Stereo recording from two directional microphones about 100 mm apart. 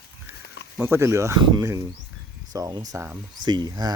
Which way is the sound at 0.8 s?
30° right (ahead or behind).